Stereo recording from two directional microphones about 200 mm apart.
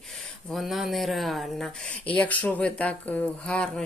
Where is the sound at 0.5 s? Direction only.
Centre (ahead or behind).